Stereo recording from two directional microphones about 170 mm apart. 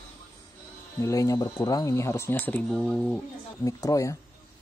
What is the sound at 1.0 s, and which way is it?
Speech, 20° left (ahead or behind).